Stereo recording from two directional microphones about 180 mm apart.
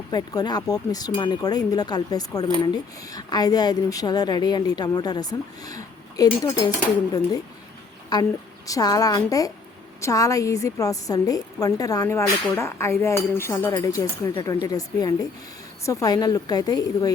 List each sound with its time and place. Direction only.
0.1 s a woman's voice: 20° left (ahead or behind)
8.1 s a woman's voice: 20° left (ahead or behind)